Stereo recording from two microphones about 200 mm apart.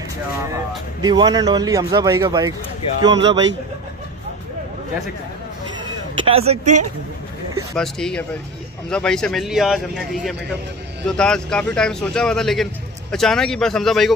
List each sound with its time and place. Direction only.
1.0 s speech: 20° right (ahead or behind)
6.1 s speech: 30° right (ahead or behind)
7.7 s a man's voice: 5° left (ahead or behind)